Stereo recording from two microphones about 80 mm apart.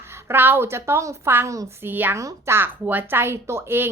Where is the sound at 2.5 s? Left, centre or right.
Right.